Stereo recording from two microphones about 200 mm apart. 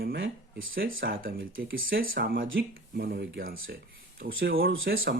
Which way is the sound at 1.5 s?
75° right (ahead or behind).